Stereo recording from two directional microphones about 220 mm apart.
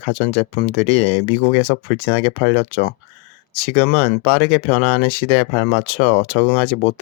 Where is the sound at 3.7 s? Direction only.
30° left (ahead or behind).